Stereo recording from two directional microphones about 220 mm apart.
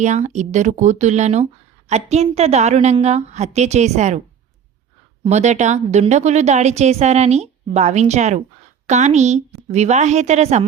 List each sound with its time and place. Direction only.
0.0 s speech: 30° right (ahead or behind)
5.2 s speech: 30° right (ahead or behind)